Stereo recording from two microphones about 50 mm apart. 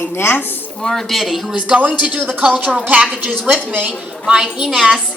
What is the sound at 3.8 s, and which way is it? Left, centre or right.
A woman's voice, centre.